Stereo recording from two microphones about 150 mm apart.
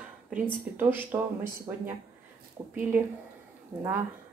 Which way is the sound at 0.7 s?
15° right (ahead or behind).